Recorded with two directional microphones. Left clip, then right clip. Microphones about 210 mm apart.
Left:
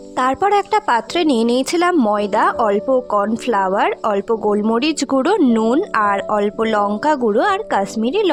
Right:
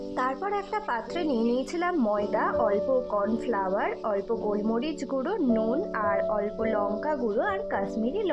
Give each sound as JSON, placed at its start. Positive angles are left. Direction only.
{"t": 0.2, "sound": "a woman's voice", "side_deg": 55}